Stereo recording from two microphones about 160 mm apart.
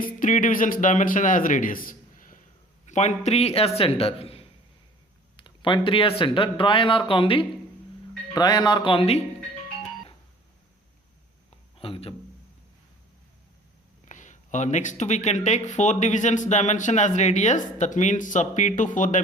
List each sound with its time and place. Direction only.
0.2 s a man's voice: 55° left (ahead or behind)
2.8 s speech: 45° left (ahead or behind)
11.8 s speech: 35° left (ahead or behind)
14.1 s speech: 50° left (ahead or behind)